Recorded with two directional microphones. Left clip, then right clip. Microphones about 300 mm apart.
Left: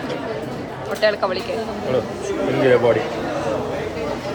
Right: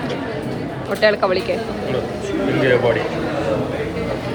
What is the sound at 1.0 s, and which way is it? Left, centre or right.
Speech, centre.